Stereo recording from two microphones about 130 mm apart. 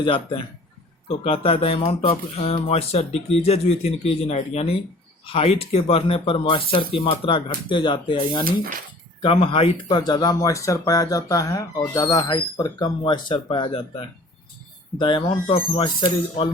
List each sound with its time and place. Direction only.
0.0 s speech: 40° left (ahead or behind)
8.4 s speech: 90° right
9.2 s speech: 45° left (ahead or behind)
9.9 s speech: 30° left (ahead or behind)
14.9 s speech: 40° left (ahead or behind)